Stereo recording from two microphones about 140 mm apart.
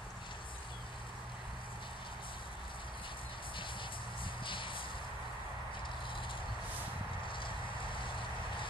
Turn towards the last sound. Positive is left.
turn(degrees=35)  # may be behind; listen again after turning